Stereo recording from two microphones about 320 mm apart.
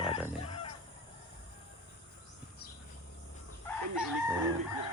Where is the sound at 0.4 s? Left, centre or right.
Centre.